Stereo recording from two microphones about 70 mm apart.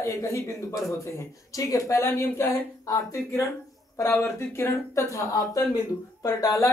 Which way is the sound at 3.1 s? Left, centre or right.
Left.